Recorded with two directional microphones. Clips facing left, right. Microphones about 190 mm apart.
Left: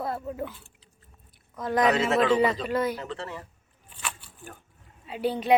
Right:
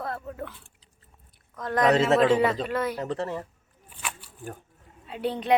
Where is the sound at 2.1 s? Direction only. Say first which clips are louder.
Right 3 dB; 30° right (ahead or behind).